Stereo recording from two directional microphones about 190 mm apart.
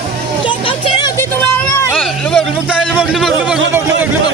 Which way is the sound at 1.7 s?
15° left (ahead or behind).